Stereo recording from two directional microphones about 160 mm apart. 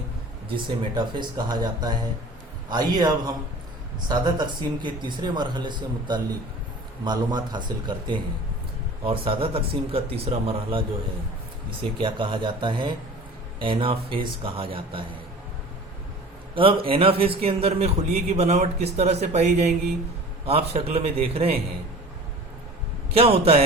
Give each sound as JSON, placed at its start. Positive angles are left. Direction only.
{"t": 0.5, "sound": "speech", "side_deg": -30}
{"t": 4.1, "sound": "a man's voice", "side_deg": -25}
{"t": 16.6, "sound": "a man's voice", "side_deg": -35}
{"t": 23.1, "sound": "a man's voice", "side_deg": -40}